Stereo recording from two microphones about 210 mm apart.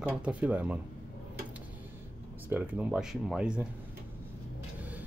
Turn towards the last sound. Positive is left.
turn(degrees=-5)  # may be behind; listen again after turning